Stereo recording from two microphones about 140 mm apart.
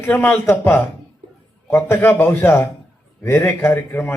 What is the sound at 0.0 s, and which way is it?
A man's voice, 10° left (ahead or behind).